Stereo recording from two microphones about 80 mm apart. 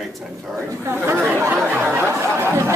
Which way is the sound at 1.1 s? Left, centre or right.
Right.